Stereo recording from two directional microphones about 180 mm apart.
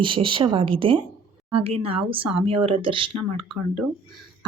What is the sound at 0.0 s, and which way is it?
Speech, 30° right (ahead or behind).